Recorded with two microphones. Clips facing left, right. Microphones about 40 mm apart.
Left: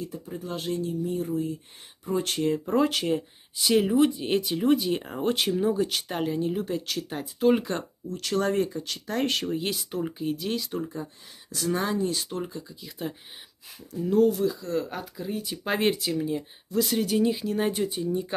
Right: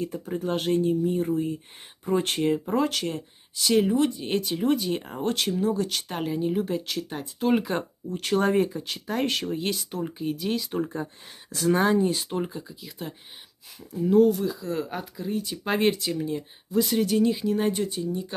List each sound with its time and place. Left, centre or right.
0.3 s speech: right
1.0 s speech: right
2.6 s speech: centre
8.1 s speech: right
8.5 s speech: centre
9.1 s speech: centre
10.7 s speech: right
12.3 s speech: right
13.0 s speech: centre